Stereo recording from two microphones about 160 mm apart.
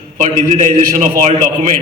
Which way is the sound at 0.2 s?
50° right (ahead or behind).